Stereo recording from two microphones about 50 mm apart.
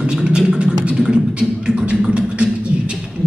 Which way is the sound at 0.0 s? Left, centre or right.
Centre.